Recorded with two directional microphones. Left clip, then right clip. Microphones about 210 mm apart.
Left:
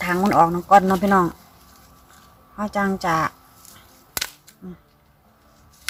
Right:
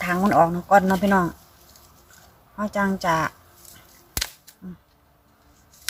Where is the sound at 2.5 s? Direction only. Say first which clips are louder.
Left 1 dB; 5° left (ahead or behind).